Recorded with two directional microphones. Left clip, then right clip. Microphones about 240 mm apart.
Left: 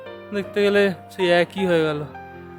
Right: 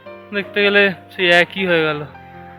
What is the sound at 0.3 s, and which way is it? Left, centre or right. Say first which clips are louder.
Speech: right 4 dB; centre.